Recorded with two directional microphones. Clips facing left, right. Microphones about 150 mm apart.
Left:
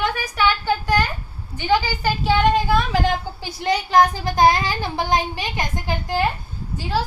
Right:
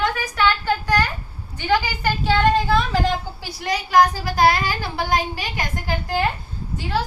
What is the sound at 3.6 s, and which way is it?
A child's voice, 25° left (ahead or behind).